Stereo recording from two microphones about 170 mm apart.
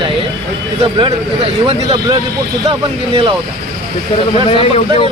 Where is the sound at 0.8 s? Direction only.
30° right (ahead or behind).